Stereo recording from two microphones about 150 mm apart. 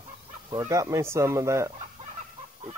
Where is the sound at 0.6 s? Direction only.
20° right (ahead or behind).